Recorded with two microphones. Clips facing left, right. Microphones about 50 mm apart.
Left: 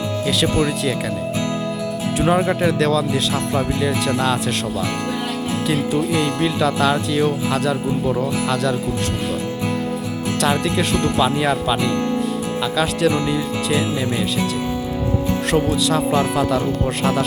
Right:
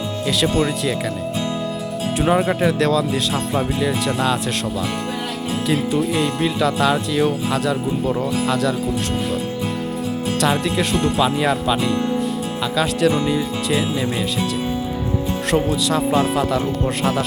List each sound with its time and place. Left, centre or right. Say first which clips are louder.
0.3 s speech: even; centre
2.1 s speech: even; centre
5.6 s speech: right 1 dB; centre
10.4 s speech: left 1 dB; centre
15.4 s speech: even; centre